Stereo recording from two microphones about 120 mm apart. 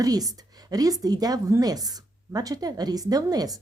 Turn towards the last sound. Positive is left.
turn(degrees=-30)  # may be behind; listen again after turning